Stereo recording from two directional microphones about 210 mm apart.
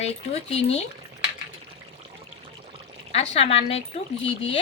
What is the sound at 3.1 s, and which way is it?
Speech, 30° left (ahead or behind).